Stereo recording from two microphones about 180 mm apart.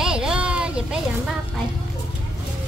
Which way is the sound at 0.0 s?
5° right (ahead or behind).